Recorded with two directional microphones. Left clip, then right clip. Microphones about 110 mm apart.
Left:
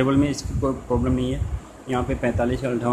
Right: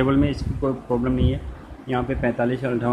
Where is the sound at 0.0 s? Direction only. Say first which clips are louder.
Even; 15° left (ahead or behind).